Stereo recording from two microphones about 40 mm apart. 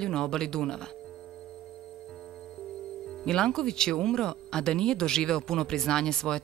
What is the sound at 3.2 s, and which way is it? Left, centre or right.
Speech, centre.